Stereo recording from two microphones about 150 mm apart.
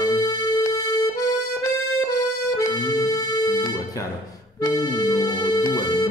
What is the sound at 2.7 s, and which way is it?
Music, 25° left (ahead or behind).